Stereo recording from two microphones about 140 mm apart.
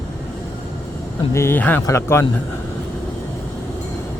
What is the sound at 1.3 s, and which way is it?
Speech, 15° left (ahead or behind).